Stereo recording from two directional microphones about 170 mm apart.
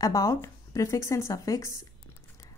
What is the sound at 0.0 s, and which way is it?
A woman's voice, 20° left (ahead or behind).